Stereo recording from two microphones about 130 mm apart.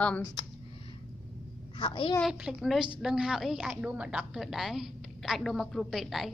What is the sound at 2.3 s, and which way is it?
A woman's voice, 5° right (ahead or behind).